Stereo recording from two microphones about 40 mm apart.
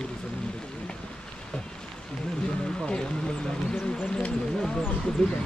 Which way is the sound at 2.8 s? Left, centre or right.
Left.